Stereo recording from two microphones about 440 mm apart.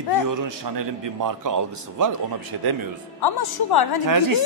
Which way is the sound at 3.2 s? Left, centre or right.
Left.